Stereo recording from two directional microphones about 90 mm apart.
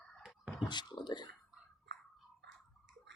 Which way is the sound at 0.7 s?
55° left (ahead or behind).